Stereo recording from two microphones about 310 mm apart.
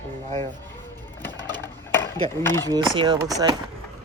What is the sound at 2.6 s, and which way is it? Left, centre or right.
Speech, centre.